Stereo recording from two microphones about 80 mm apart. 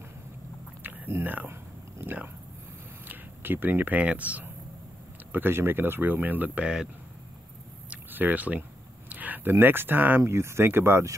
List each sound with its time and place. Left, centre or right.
0.8 s a sound: right
3.1 s speech: right
5.3 s speech: right; by 6.9 s centre
7.9 s a sound: right
9.1 s speech: right
10.2 s speech: right